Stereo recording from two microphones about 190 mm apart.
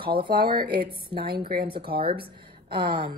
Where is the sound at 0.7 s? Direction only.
25° right (ahead or behind).